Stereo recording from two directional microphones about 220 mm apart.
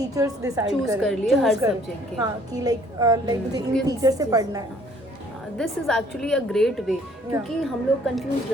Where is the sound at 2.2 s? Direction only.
15° right (ahead or behind).